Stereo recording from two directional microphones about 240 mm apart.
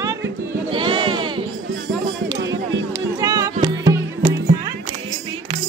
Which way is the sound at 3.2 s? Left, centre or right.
Centre.